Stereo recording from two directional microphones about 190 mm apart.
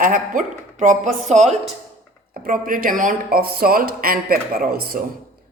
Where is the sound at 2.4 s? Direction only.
45° right (ahead or behind).